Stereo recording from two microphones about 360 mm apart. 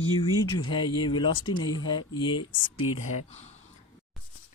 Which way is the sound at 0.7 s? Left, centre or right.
Centre.